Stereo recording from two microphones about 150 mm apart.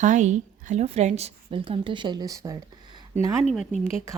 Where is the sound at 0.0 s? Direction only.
55° right (ahead or behind); by 2.6 s 20° right (ahead or behind).